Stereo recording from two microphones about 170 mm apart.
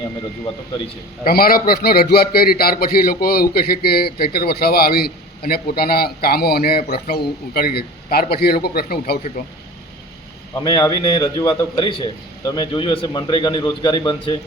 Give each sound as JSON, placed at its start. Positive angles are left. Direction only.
{"t": 1.2, "sound": "a man's voice", "side_deg": 60}
{"t": 10.5, "sound": "a man's voice", "side_deg": 20}